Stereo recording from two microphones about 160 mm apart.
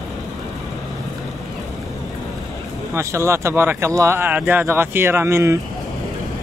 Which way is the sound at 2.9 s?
15° right (ahead or behind).